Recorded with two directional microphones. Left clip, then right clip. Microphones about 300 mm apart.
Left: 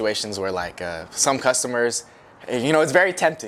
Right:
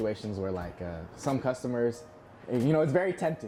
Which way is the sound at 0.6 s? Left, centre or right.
Centre.